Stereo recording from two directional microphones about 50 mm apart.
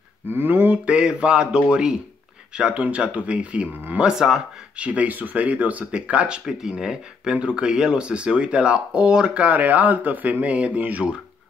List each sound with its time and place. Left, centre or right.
0.3 s speech: right
0.8 s speech: right
4.0 s speech: centre
4.7 s speech: right; by 7.3 s centre
7.3 s speech: right